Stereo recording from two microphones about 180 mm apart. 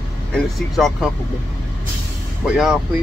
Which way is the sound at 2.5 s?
5° right (ahead or behind).